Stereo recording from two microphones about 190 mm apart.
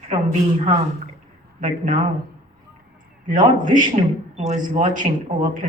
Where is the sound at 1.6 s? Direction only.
40° right (ahead or behind).